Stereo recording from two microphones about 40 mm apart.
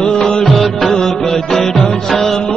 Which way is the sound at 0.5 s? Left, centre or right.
Centre.